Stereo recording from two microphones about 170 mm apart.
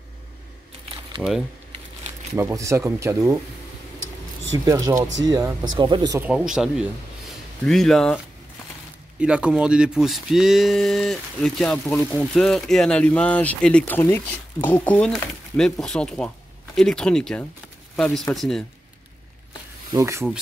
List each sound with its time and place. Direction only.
1.2 s speech: centre (ahead or behind)
2.3 s speech: 15° right (ahead or behind)
4.6 s speech: 20° right (ahead or behind)
6.2 s speech: 5° right (ahead or behind)
9.2 s speech: 5° right (ahead or behind)
19.9 s speech: 20° right (ahead or behind)